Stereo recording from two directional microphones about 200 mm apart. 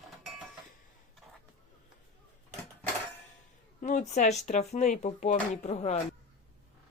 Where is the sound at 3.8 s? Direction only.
35° left (ahead or behind).